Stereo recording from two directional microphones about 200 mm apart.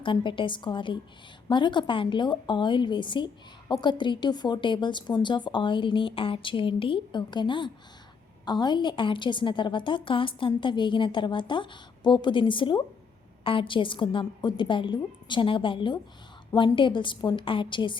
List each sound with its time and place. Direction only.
0.0 s a woman's voice: 25° left (ahead or behind)